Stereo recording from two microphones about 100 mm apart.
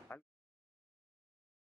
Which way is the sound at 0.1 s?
25° left (ahead or behind).